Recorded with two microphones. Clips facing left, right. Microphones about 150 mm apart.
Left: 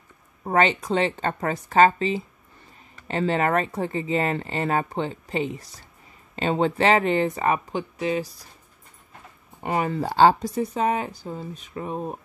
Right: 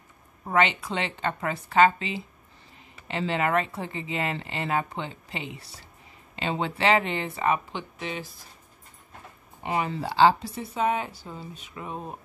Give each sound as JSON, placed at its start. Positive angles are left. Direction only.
{"t": 0.4, "sound": "speech", "side_deg": 40}
{"t": 9.6, "sound": "speech", "side_deg": 45}